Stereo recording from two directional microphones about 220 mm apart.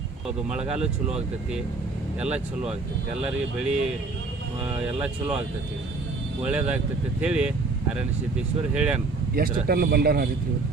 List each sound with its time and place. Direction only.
0.4 s speech: 5° right (ahead or behind)
3.2 s speech: 5° right (ahead or behind)
6.4 s speech: 5° right (ahead or behind)
8.7 s speech: 5° right (ahead or behind)
9.3 s speech: 45° right (ahead or behind)